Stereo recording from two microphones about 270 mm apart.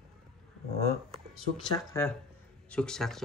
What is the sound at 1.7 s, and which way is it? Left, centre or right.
Speech, centre.